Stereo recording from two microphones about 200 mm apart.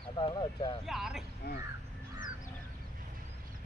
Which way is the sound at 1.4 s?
50° left (ahead or behind).